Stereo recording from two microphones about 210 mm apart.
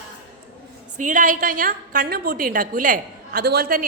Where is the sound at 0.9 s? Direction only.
35° right (ahead or behind).